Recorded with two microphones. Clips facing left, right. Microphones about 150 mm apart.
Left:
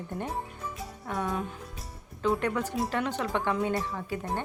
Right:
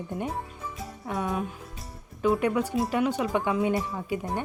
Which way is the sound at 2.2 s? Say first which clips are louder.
Right 4 dB; 10° right (ahead or behind).